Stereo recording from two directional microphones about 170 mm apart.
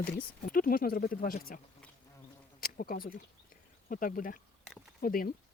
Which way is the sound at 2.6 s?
60° left (ahead or behind).